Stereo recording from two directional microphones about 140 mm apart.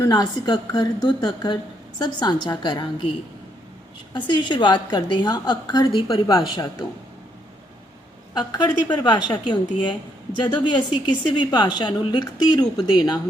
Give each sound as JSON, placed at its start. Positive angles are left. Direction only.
{"t": 0.0, "sound": "a woman's voice", "side_deg": 30}
{"t": 4.1, "sound": "a woman's voice", "side_deg": 35}
{"t": 8.3, "sound": "a woman's voice", "side_deg": 30}